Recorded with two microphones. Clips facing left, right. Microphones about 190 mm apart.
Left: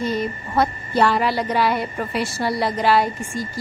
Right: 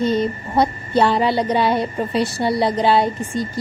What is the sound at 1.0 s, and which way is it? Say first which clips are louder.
A woman's voice: right 1 dB; 25° right (ahead or behind).